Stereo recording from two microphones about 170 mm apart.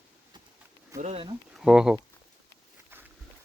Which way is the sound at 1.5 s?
5° right (ahead or behind).